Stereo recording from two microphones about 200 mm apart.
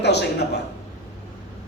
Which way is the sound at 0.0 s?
55° left (ahead or behind).